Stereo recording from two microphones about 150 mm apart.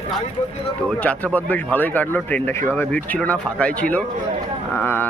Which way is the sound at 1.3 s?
10° left (ahead or behind).